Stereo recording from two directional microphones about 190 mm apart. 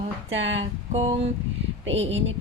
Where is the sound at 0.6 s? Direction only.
30° right (ahead or behind).